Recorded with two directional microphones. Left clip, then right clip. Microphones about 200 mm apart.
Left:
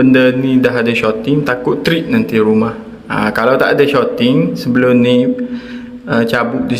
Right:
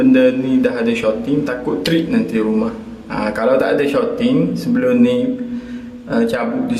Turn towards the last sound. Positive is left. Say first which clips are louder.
# left 4 dB
turn(degrees=30)  # may be behind; listen again after turning